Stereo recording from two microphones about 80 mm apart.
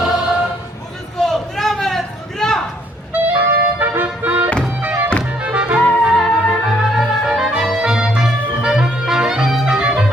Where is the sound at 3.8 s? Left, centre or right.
Right.